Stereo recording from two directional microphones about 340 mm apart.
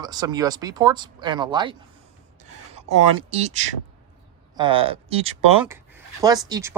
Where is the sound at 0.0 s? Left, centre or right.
Centre.